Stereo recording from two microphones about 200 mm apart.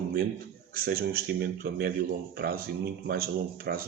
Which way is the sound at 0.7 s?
50° right (ahead or behind).